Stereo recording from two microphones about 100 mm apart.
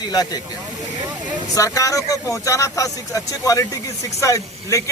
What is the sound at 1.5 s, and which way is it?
A man's voice, 35° left (ahead or behind).